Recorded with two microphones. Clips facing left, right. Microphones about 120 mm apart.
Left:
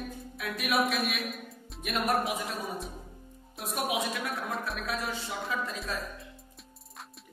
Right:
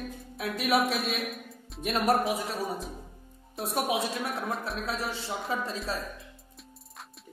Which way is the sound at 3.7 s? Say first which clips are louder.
Right 2 dB; 30° right (ahead or behind).